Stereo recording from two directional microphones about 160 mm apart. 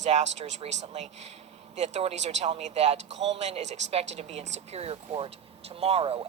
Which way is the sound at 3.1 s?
90° right.